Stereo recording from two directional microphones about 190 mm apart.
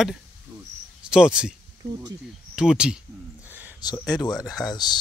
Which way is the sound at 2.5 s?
5° right (ahead or behind).